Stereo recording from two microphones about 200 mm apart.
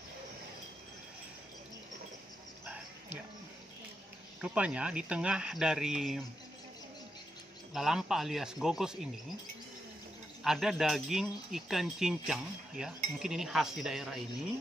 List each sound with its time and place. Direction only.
2.6 s a sound: 5° right (ahead or behind)
4.4 s speech: 5° right (ahead or behind)
7.7 s speech: centre (ahead or behind)
10.4 s speech: centre (ahead or behind)